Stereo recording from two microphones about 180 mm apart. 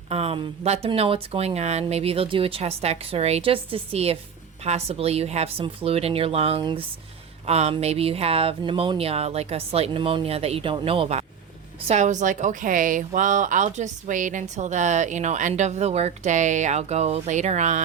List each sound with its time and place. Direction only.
0.1 s a woman's voice: 35° right (ahead or behind)